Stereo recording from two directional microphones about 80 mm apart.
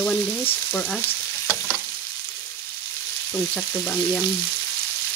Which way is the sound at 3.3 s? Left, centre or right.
Left.